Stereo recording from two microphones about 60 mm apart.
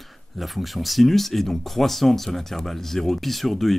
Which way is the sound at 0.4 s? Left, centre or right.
Centre.